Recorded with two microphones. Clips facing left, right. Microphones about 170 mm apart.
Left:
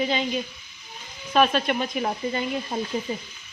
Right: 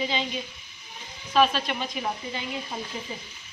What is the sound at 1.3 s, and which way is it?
Speech, 55° left (ahead or behind).